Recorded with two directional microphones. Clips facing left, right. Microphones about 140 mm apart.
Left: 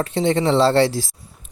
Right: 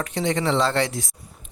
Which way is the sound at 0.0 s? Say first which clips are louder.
Left 5 dB; 30° left (ahead or behind).